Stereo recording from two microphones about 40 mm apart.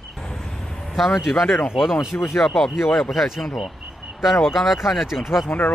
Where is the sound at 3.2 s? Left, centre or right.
Centre.